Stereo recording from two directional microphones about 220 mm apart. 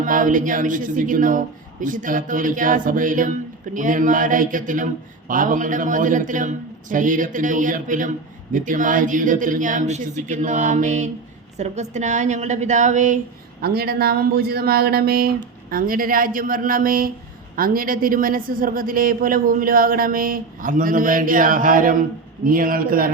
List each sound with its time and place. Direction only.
0.0 s a man's voice: 35° right (ahead or behind)
13.6 s a man's voice: 45° right (ahead or behind)